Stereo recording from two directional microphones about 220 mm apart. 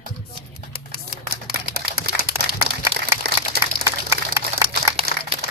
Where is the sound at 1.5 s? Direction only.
45° right (ahead or behind).